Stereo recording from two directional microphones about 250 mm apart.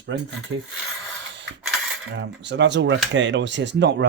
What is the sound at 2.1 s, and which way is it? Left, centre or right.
Speech, right.